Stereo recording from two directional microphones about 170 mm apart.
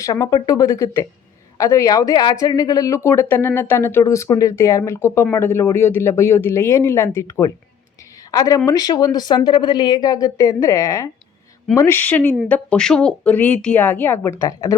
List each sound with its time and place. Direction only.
0.0 s speech: 20° left (ahead or behind)